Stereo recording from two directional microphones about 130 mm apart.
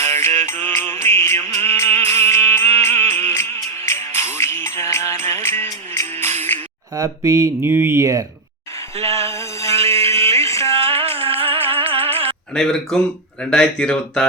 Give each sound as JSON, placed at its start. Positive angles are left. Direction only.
{"t": 0.0, "sound": "music", "side_deg": 20}
{"t": 6.5, "sound": "a sound", "side_deg": 15}
{"t": 6.9, "sound": "speech", "side_deg": -25}
{"t": 9.7, "sound": "a sound", "side_deg": -50}
{"t": 10.4, "sound": "music", "side_deg": 20}
{"t": 10.8, "sound": "music", "side_deg": -50}
{"t": 12.5, "sound": "speech", "side_deg": 5}